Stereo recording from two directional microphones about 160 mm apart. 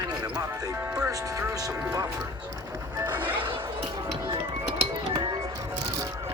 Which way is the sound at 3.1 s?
10° right (ahead or behind).